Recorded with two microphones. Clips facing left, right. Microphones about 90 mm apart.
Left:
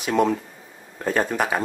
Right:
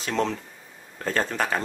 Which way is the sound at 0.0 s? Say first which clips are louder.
Left 6 dB; 10° left (ahead or behind).